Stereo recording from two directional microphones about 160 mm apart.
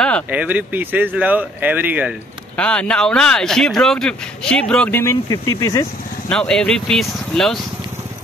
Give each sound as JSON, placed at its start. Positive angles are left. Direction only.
{"t": 0.3, "sound": "speech", "side_deg": -10}
{"t": 2.5, "sound": "speech", "side_deg": 5}
{"t": 5.3, "sound": "speech", "side_deg": 20}
{"t": 6.2, "sound": "speech", "side_deg": 5}